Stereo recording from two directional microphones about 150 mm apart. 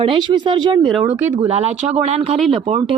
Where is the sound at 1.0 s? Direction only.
15° right (ahead or behind).